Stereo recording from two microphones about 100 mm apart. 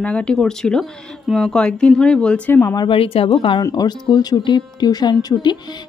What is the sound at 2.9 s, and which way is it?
Speech, 70° left (ahead or behind).